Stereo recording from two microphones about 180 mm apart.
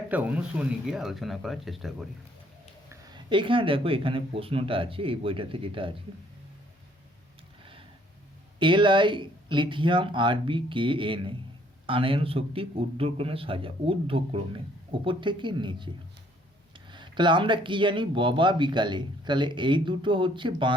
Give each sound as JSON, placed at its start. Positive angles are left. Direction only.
{"t": 0.1, "sound": "speech", "side_deg": -10}
{"t": 3.2, "sound": "speech", "side_deg": -25}
{"t": 8.5, "sound": "a man's voice", "side_deg": -25}